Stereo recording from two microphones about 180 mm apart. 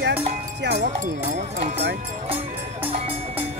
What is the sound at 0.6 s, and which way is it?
Speech, 70° right (ahead or behind).